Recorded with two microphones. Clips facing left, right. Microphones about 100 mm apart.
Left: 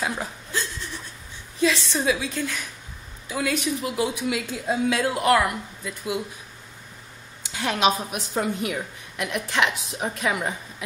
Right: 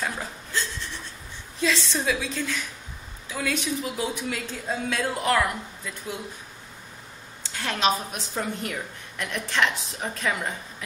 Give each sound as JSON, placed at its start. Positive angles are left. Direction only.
{"t": 0.0, "sound": "chuckle", "side_deg": 10}
{"t": 1.6, "sound": "a woman's voice", "side_deg": 5}
{"t": 7.4, "sound": "a woman's voice", "side_deg": 15}